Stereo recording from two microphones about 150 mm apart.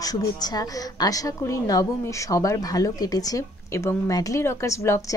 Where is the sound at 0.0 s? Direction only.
25° left (ahead or behind).